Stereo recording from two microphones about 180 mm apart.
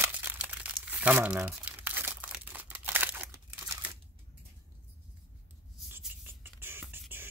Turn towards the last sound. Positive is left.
turn(degrees=-10)  # may be behind; listen again after turning